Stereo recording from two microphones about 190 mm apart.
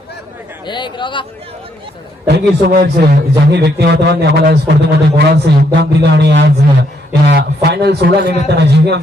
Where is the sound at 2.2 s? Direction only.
55° right (ahead or behind).